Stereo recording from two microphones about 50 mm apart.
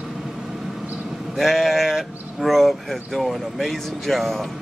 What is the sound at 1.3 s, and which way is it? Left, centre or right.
Speech, centre.